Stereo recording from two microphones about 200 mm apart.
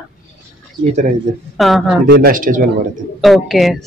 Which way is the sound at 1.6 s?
Centre (ahead or behind).